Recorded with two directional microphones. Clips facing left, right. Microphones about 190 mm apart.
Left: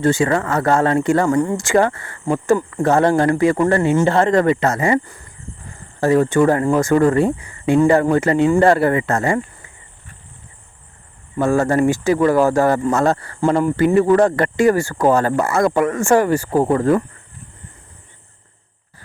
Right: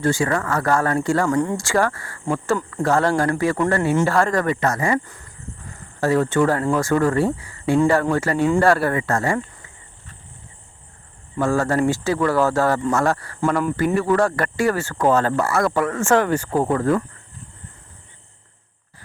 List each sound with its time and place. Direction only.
0.0 s speech: 25° left (ahead or behind)
6.0 s speech: 15° left (ahead or behind)
11.3 s speech: 20° left (ahead or behind)